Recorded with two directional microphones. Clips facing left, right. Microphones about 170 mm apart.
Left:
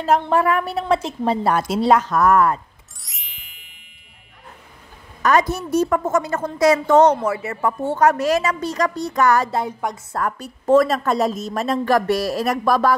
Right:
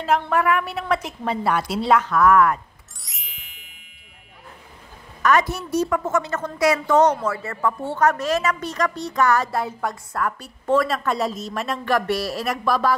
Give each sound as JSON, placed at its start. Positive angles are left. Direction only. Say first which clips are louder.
{"t": 0.2, "sound": "a woman's voice", "louder": "left 2 dB", "side_deg": 30}
{"t": 3.0, "sound": "music", "louder": "right 1 dB", "side_deg": 0}
{"t": 5.2, "sound": "a woman's voice", "louder": "left 2 dB", "side_deg": 35}
{"t": 5.6, "sound": "a woman's voice", "louder": "left 3 dB", "side_deg": 50}
{"t": 7.2, "sound": "speech", "louder": "left 2 dB", "side_deg": 25}
{"t": 7.8, "sound": "a woman's voice", "louder": "left 5 dB", "side_deg": 40}
{"t": 9.5, "sound": "a woman's voice", "louder": "left 2 dB", "side_deg": 15}
{"t": 10.1, "sound": "a woman's voice", "louder": "left 2 dB", "side_deg": 40}